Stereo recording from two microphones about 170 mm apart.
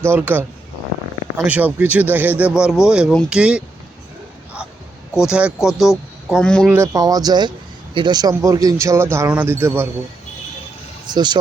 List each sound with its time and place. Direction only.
0.0 s speech: 10° right (ahead or behind)
1.5 s speech: 10° right (ahead or behind)
5.2 s speech: 5° right (ahead or behind)
6.7 s speech: 15° right (ahead or behind)
11.1 s speech: 25° right (ahead or behind)